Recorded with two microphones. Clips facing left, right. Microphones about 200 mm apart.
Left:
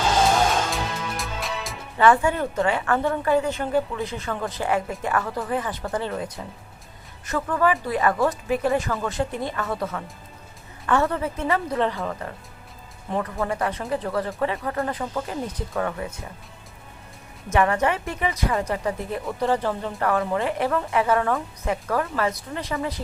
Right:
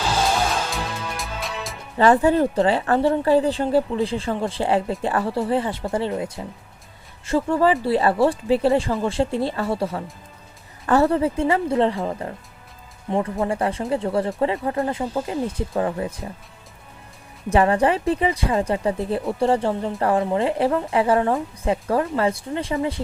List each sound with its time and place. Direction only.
0.7 s music: centre (ahead or behind)
2.2 s speech: 35° right (ahead or behind)
17.5 s speech: 30° right (ahead or behind)